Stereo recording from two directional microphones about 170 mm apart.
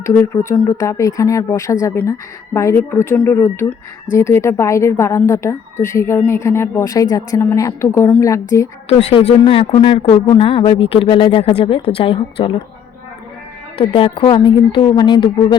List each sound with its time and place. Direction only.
0.0 s speech: 15° left (ahead or behind)
8.9 s speech: 35° left (ahead or behind)
13.7 s a woman's voice: 30° left (ahead or behind)